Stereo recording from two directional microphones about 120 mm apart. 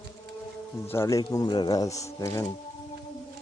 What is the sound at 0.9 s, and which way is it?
Speech, 25° left (ahead or behind).